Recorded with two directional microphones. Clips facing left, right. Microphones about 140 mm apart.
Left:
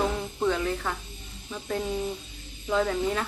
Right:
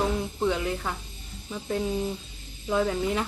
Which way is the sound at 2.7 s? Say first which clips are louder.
Even; 10° right (ahead or behind).